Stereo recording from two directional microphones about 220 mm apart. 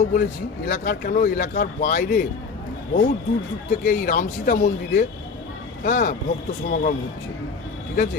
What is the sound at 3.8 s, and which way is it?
Speech, 40° left (ahead or behind).